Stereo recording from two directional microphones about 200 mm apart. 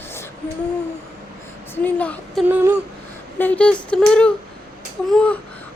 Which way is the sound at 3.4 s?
5° left (ahead or behind).